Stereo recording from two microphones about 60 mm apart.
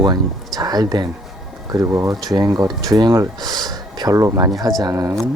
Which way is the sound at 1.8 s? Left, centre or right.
Right.